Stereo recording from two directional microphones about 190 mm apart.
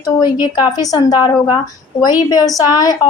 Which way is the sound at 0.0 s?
20° left (ahead or behind).